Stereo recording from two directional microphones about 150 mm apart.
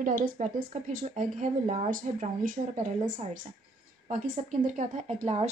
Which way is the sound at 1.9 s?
60° right (ahead or behind).